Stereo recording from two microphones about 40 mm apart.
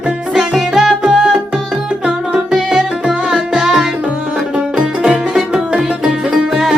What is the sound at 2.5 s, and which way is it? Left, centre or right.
Music, centre.